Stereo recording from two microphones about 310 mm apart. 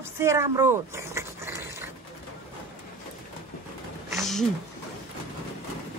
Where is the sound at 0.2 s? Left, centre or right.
Centre.